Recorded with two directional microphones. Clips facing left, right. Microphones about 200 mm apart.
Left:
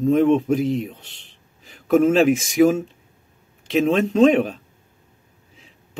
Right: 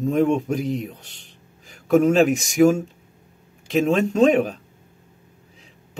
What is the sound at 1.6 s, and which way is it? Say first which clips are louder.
Speech: left 1 dB; centre (ahead or behind).